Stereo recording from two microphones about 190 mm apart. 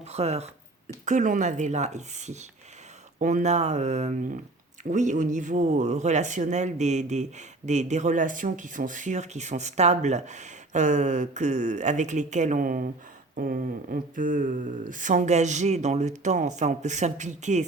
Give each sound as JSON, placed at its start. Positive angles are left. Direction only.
{"t": 0.0, "sound": "speech", "side_deg": -35}